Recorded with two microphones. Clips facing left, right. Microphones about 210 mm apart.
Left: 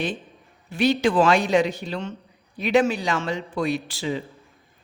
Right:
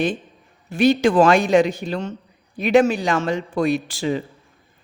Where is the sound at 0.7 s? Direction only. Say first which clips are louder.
Right 4 dB; 45° right (ahead or behind).